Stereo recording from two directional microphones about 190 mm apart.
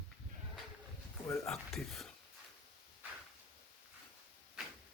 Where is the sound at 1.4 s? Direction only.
Centre (ahead or behind).